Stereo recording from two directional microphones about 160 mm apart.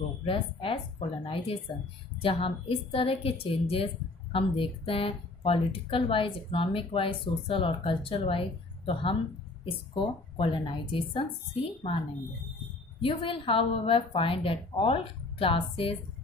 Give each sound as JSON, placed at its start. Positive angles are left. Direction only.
{"t": 0.2, "sound": "speech", "side_deg": 35}
{"t": 13.0, "sound": "speech", "side_deg": 35}